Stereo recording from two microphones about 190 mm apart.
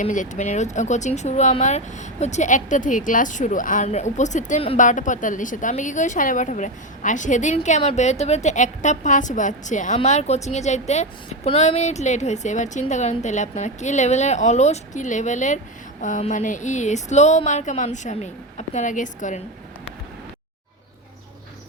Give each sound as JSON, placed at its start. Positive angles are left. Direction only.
{"t": 0.0, "sound": "speech", "side_deg": 40}